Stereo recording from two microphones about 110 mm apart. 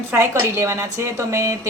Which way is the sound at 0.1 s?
25° right (ahead or behind).